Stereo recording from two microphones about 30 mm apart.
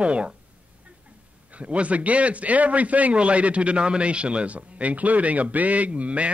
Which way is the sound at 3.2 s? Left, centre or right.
Right.